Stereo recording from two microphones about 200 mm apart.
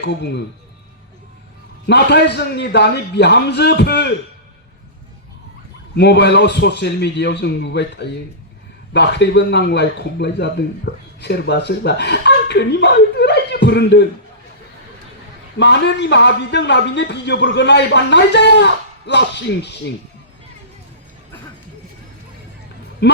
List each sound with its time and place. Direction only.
0.1 s a man's voice: 60° left (ahead or behind)
1.9 s a man's voice: 60° left (ahead or behind)
6.0 s a man's voice: 60° left (ahead or behind)
15.5 s a man's voice: 60° left (ahead or behind)
23.0 s speech: 55° left (ahead or behind)